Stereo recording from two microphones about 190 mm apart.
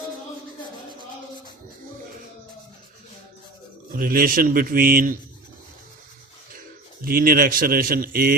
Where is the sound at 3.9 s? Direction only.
45° right (ahead or behind).